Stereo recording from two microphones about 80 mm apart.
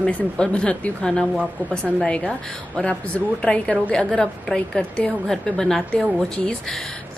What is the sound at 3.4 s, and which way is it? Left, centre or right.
A woman's voice, centre.